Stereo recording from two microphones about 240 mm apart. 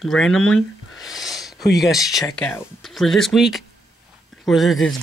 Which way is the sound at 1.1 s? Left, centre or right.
Centre.